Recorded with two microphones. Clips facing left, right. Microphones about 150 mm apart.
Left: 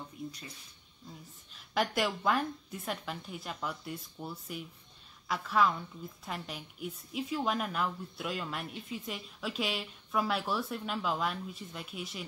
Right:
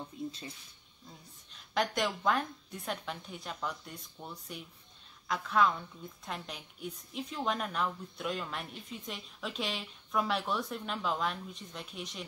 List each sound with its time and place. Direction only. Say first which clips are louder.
0.2 s speech: right 3 dB; 25° right (ahead or behind)
1.5 s a woman's voice: left 1 dB; 5° left (ahead or behind)